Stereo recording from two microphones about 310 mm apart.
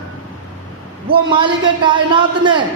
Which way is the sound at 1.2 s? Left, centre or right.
Centre.